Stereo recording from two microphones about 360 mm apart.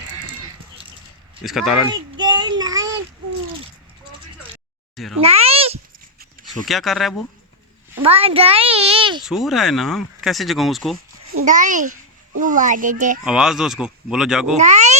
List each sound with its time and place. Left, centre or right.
1.5 s speech: centre
1.9 s child singing: centre
5.2 s cat: centre
6.5 s speech: centre
7.9 s a child's voice: centre
9.2 s speech: centre
11.4 s a child's voice: right
13.2 s speech: centre
14.5 s a sound: centre